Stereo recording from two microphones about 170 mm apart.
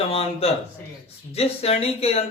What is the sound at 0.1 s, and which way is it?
Speech, 35° left (ahead or behind).